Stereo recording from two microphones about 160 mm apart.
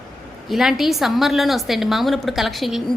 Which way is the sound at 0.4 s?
Centre (ahead or behind).